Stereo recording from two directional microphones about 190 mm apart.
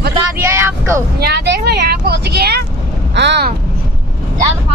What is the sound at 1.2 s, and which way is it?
Speech, 60° right (ahead or behind).